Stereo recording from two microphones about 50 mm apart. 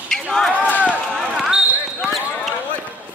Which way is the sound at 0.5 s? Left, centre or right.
Right.